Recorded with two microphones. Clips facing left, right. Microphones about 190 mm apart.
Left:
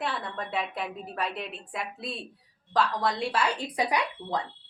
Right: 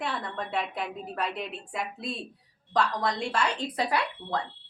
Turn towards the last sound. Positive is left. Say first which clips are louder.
# even
turn(degrees=15)  # may be behind; listen again after turning